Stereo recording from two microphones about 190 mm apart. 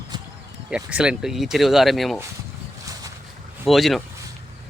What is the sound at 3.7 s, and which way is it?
Speech, centre (ahead or behind).